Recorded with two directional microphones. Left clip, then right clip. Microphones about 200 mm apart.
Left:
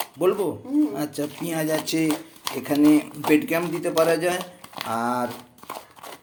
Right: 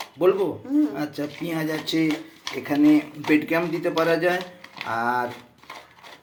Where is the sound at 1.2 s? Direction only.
35° left (ahead or behind).